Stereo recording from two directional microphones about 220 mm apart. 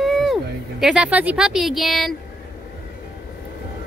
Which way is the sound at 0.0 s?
Centre (ahead or behind).